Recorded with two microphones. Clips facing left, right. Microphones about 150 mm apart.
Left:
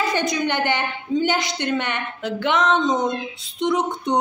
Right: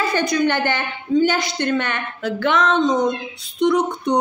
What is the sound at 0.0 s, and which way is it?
A woman's voice, 20° left (ahead or behind).